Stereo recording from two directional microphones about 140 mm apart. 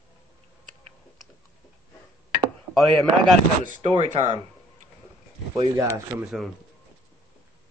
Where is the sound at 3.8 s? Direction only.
40° right (ahead or behind).